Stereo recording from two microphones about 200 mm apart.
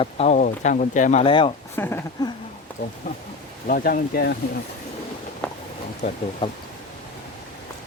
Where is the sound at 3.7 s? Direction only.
45° left (ahead or behind).